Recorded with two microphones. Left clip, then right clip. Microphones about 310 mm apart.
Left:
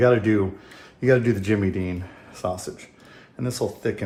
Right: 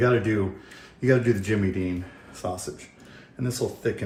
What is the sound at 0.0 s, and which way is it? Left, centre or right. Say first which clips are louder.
Speech: left 4 dB; left.